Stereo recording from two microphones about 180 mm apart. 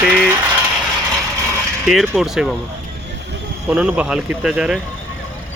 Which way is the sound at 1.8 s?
Centre (ahead or behind).